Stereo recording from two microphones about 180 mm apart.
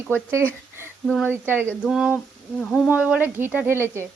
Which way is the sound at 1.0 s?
5° left (ahead or behind).